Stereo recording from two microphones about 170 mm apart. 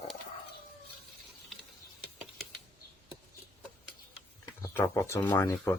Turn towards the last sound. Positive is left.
turn(degrees=15)  # may be behind; listen again after turning